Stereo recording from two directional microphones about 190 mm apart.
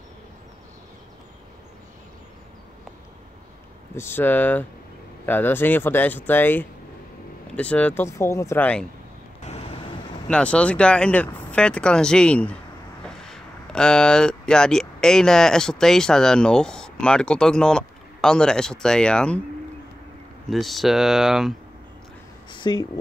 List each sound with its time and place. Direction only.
3.9 s speech: 10° left (ahead or behind)
9.4 s vehicle: 35° left (ahead or behind)
10.2 s speech: 5° left (ahead or behind)
20.4 s speech: centre (ahead or behind)
22.5 s a sound: 25° left (ahead or behind)